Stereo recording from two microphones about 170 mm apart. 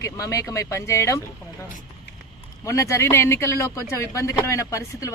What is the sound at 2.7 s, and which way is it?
Speech, 15° left (ahead or behind).